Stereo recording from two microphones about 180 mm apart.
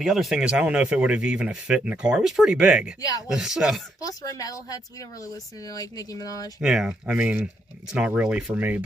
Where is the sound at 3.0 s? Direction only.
20° left (ahead or behind).